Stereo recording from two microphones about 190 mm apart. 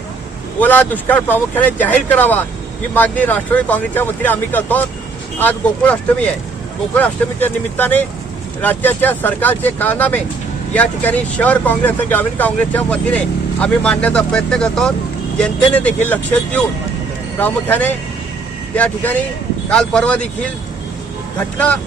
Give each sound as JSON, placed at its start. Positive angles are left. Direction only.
{"t": 0.6, "sound": "speech", "side_deg": 10}
{"t": 19.7, "sound": "speech", "side_deg": 5}